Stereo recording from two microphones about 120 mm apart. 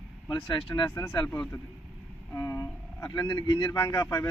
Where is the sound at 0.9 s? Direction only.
35° left (ahead or behind).